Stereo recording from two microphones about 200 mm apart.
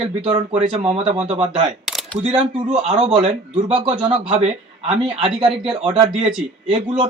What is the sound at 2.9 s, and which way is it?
A man's voice, 25° right (ahead or behind).